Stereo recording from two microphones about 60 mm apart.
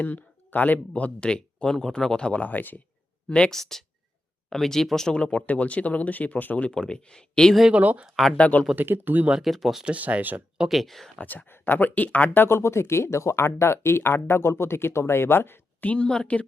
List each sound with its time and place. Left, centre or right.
0.0 s speech: left
3.2 s speech: centre
6.7 s speech: centre
7.7 s speech: right
8.4 s speech: left
8.7 s speech: right
9.4 s speech: centre
9.8 s speech: right
10.6 s speech: centre
11.2 s speech: left
12.3 s speech: left
15.8 s speech: left